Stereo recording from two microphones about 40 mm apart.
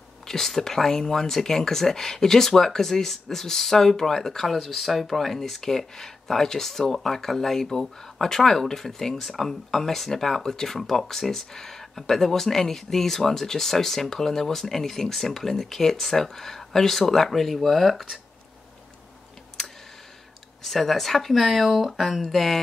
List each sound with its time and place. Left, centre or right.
0.3 s speech: centre
19.6 s clicking: centre
20.6 s speech: centre
22.2 s speech: centre